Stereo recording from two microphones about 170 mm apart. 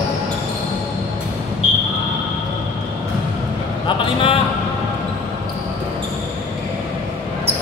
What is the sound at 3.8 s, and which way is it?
Vehicle, 30° left (ahead or behind).